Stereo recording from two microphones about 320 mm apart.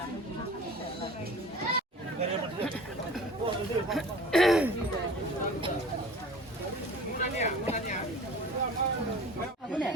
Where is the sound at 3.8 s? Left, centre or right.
Centre.